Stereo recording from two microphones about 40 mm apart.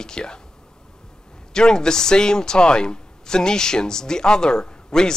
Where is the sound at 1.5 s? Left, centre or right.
Centre.